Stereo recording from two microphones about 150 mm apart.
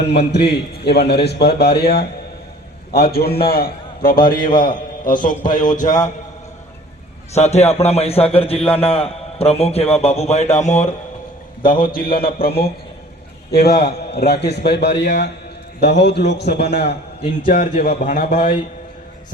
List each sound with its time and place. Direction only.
0.0 s a man's voice: 90° left; by 6.0 s 55° left (ahead or behind)
7.3 s a man's voice: 45° left (ahead or behind)
11.6 s a man's voice: 70° left (ahead or behind); by 14.9 s 90° left
16.5 s a man's voice: 90° left
17.4 s a man's voice: 60° left (ahead or behind)
18.0 s a man's voice: 70° left (ahead or behind)